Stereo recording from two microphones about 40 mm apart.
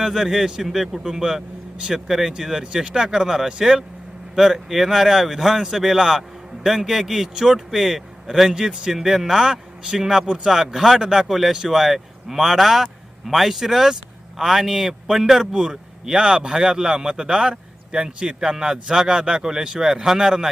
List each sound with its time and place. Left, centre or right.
0.0 s speech: centre
8.4 s speech: centre
11.3 s a man's voice: centre